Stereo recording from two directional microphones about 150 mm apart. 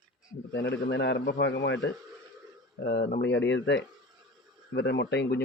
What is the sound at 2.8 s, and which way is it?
Speech, 90° left.